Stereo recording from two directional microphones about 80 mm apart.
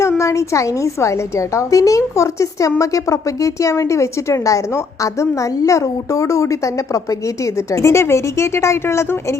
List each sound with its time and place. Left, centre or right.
0.2 s a woman's voice: left